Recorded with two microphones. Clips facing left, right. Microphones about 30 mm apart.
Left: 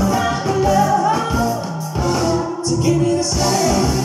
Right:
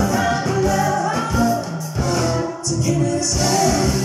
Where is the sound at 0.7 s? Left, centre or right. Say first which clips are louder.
Left 4 dB; centre.